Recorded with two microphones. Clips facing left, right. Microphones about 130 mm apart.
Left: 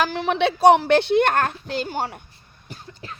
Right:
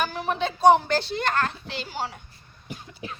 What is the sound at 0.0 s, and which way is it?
A woman's voice, 90° left.